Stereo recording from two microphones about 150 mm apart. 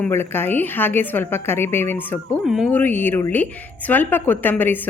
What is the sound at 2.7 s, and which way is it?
A woman's voice, 10° left (ahead or behind).